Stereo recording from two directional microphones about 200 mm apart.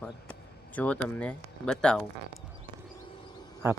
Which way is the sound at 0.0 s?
5° left (ahead or behind).